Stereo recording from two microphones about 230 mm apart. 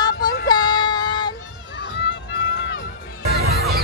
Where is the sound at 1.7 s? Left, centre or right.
Left.